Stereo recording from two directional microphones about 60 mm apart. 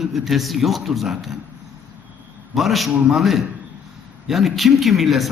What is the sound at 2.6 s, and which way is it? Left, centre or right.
A man's voice, centre.